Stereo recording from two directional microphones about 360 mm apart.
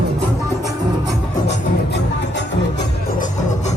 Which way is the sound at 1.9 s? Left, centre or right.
Left.